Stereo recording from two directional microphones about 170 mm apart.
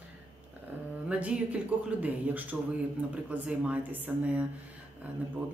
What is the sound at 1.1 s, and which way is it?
Speech, 10° right (ahead or behind).